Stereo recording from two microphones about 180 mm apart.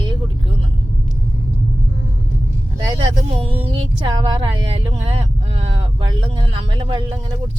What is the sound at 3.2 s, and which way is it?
Speech, 35° right (ahead or behind).